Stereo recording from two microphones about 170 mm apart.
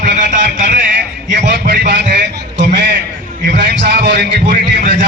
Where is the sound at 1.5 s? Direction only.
90° right.